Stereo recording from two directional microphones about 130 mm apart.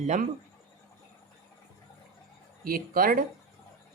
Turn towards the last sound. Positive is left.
turn(degrees=-90)